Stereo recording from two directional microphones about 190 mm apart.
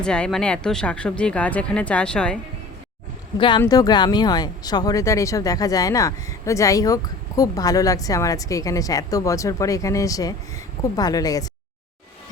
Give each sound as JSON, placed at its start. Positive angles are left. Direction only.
{"t": 0.0, "sound": "speech", "side_deg": 5}
{"t": 3.3, "sound": "speech", "side_deg": 25}